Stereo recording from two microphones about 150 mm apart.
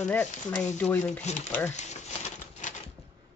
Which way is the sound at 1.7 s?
50° left (ahead or behind).